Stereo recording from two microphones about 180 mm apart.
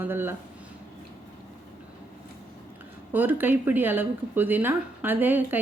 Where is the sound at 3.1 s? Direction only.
10° right (ahead or behind).